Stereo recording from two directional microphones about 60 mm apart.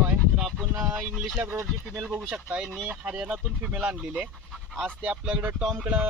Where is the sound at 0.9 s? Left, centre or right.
Right.